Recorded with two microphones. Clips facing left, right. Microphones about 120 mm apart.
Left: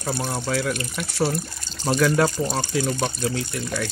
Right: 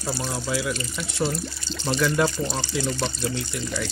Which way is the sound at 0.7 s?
60° left (ahead or behind).